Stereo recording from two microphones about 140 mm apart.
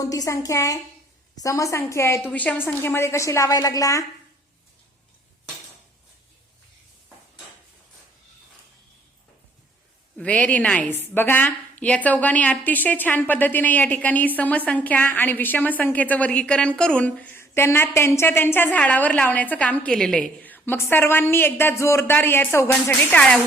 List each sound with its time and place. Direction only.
0.0 s a woman's voice: 25° left (ahead or behind)
10.2 s a woman's voice: 10° left (ahead or behind)